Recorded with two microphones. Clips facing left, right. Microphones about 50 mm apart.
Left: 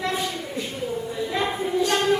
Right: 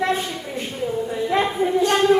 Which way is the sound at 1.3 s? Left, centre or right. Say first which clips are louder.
Right 6 dB; right.